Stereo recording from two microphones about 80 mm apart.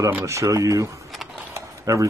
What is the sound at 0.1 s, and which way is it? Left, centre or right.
Speech, right.